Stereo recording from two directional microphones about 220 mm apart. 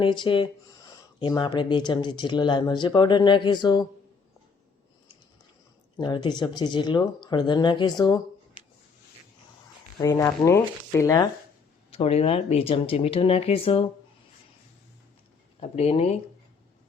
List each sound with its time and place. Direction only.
0.0 s speech: 20° left (ahead or behind)
6.0 s speech: 20° left (ahead or behind)
10.0 s speech: 15° left (ahead or behind)
11.9 s speech: 25° left (ahead or behind)
15.6 s speech: 30° left (ahead or behind)